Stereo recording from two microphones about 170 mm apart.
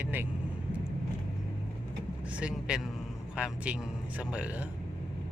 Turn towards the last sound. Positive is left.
turn(degrees=-5)  # may be behind; listen again after turning